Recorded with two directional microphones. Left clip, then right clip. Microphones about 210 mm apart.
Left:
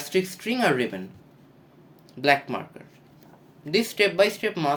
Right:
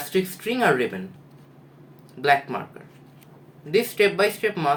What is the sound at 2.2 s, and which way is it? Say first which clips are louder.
Speech: right 1 dB; 50° left (ahead or behind).